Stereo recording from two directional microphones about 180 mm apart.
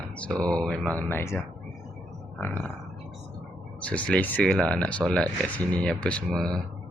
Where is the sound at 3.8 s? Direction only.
5° left (ahead or behind).